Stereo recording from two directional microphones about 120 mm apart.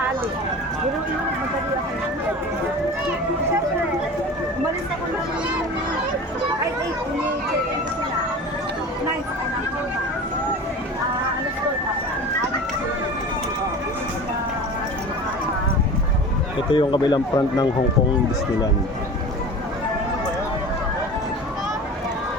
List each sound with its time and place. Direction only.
16.7 s speech: 40° left (ahead or behind)